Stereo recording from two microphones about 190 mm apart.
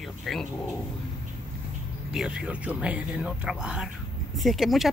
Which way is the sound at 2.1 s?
5° right (ahead or behind).